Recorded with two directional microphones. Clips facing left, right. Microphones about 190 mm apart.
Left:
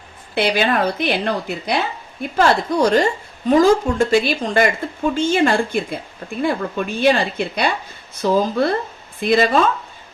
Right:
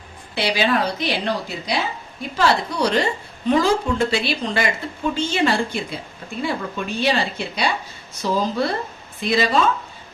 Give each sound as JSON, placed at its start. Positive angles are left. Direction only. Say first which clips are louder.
{"t": 0.3, "sound": "a woman's voice", "louder": "left 3 dB", "side_deg": 50}